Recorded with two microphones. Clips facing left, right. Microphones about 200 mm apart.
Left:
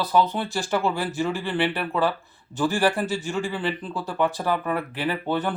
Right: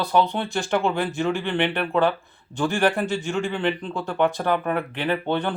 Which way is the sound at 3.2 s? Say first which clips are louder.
Right 2 dB; 35° left (ahead or behind).